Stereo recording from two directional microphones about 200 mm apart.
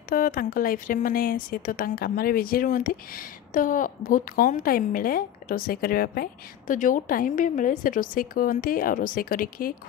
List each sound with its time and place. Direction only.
0.1 s speech: 45° left (ahead or behind)